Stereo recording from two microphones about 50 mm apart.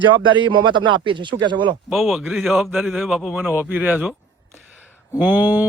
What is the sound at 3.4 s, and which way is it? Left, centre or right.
Speech, right.